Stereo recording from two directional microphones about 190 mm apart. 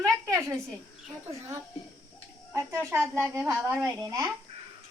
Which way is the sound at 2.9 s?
15° right (ahead or behind).